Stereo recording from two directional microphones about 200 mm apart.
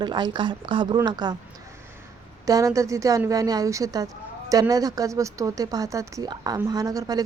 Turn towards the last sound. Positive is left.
turn(degrees=-20)  # may be behind; listen again after turning